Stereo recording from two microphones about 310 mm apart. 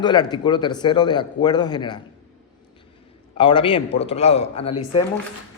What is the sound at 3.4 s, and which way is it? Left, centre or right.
A man's voice, centre.